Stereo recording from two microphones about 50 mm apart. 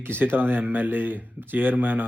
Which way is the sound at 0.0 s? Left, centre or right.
Right.